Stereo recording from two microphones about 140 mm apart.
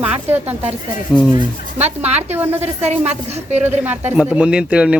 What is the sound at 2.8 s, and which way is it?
Speech, 50° right (ahead or behind).